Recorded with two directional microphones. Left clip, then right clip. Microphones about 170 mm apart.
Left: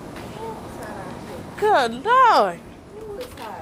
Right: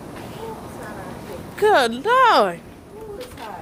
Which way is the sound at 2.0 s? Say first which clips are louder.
Even; 75° right (ahead or behind).